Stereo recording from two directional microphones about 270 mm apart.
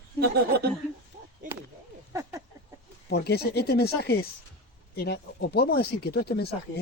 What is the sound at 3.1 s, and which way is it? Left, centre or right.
Speech, left.